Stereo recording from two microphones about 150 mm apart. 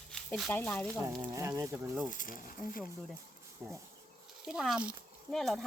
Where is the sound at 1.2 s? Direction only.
20° right (ahead or behind).